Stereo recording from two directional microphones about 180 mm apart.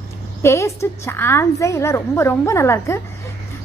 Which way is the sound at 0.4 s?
15° left (ahead or behind).